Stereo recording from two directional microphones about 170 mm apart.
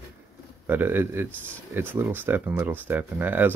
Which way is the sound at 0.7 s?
10° right (ahead or behind).